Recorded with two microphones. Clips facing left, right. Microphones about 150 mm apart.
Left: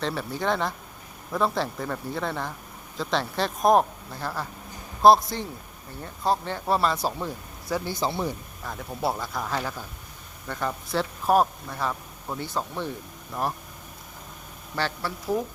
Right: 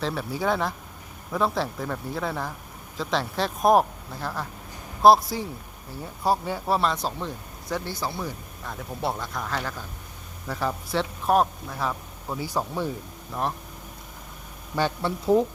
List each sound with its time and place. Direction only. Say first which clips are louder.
0.0 s a man's voice: right 1 dB; centre (ahead or behind)
6.7 s speech: left 3 dB; 5° left (ahead or behind); by 8.3 s 20° left (ahead or behind)
8.6 s a man's voice: left 1 dB; centre (ahead or behind)
10.4 s a man's voice: right 2 dB; 5° right (ahead or behind)
14.8 s speech: right 4 dB; 20° right (ahead or behind)